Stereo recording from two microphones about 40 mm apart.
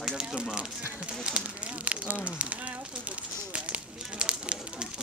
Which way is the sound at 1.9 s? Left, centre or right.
Right.